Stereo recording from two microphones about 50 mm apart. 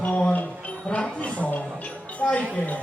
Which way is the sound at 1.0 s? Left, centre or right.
Left.